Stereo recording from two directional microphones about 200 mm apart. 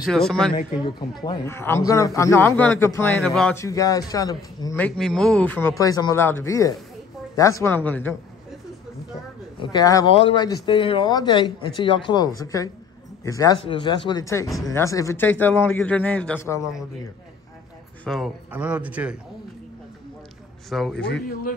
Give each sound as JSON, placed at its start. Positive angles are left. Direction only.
{"t": 0.0, "sound": "speech", "side_deg": 5}
{"t": 0.6, "sound": "a man's voice", "side_deg": 25}
{"t": 3.5, "sound": "a man's voice", "side_deg": 15}
{"t": 4.7, "sound": "a man's voice", "side_deg": 5}
{"t": 9.6, "sound": "a man's voice", "side_deg": 20}
{"t": 18.0, "sound": "a man's voice", "side_deg": 0}
{"t": 20.7, "sound": "speech", "side_deg": 0}
{"t": 21.3, "sound": "speech", "side_deg": 45}